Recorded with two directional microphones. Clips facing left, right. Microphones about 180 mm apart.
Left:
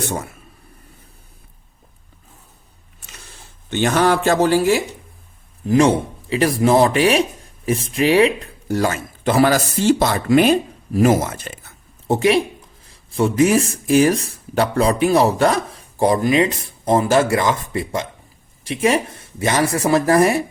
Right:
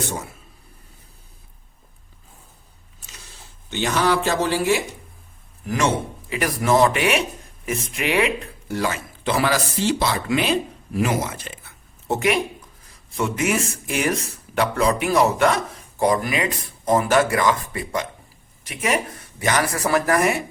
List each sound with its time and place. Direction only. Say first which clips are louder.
3.7 s speech: left 4 dB; 50° left (ahead or behind)
5.6 s speech: left 7 dB; 30° left (ahead or behind)